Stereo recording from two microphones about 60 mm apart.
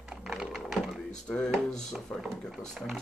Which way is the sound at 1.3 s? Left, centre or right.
Centre.